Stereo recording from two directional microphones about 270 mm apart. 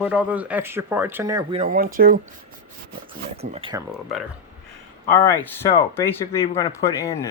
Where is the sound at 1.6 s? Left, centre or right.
Right.